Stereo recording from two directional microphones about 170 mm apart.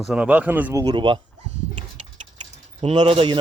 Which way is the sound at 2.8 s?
30° right (ahead or behind).